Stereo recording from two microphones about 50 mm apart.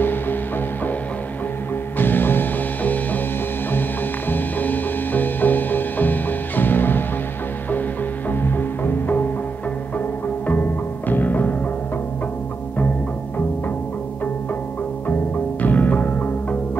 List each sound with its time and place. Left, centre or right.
0.0 s music: left
2.0 s music: left
4.3 s music: left
8.3 s music: left
15.6 s music: left